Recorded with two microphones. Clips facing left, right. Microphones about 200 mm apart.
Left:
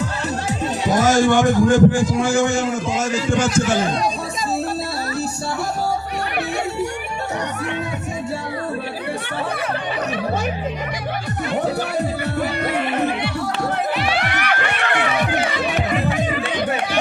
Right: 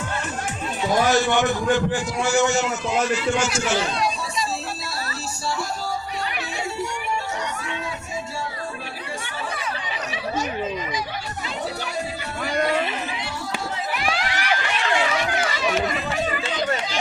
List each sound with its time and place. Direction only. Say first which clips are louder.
0.9 s a man's voice: left 4 dB; 45° left (ahead or behind)
3.1 s a man's voice: left 1 dB; 90° left
12.4 s music: right 1 dB; 60° left (ahead or behind)
14.2 s run: left 3 dB; 65° left (ahead or behind)